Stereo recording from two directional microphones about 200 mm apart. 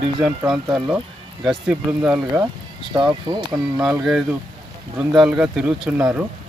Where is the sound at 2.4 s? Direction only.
20° right (ahead or behind).